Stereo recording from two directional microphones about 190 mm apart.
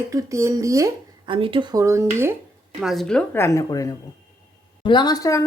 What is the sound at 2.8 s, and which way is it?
A woman's voice, centre (ahead or behind).